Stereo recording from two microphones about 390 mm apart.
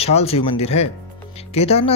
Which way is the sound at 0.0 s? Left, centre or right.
Centre.